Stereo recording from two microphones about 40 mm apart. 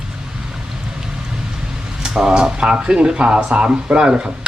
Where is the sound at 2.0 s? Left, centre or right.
Centre.